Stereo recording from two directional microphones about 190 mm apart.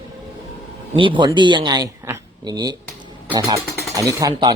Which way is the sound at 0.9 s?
25° right (ahead or behind).